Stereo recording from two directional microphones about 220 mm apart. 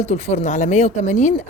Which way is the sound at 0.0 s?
30° left (ahead or behind).